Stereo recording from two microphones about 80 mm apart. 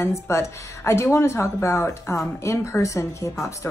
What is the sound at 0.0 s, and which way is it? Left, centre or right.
A woman's voice, left.